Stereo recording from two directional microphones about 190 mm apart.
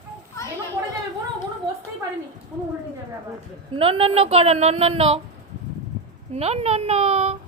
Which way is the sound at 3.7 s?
30° right (ahead or behind).